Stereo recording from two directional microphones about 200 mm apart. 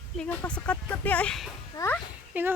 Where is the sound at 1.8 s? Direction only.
20° left (ahead or behind).